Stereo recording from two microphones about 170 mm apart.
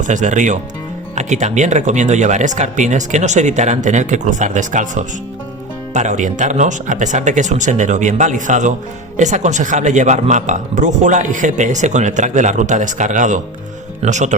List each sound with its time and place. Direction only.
0.0 s speech: 45° right (ahead or behind)